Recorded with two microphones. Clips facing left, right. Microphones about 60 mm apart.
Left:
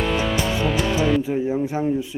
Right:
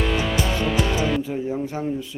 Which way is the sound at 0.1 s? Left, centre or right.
Centre.